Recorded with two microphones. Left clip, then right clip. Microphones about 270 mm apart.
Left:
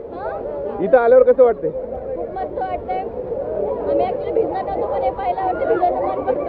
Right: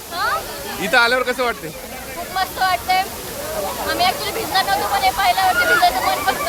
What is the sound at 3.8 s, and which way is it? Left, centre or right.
Speech, centre.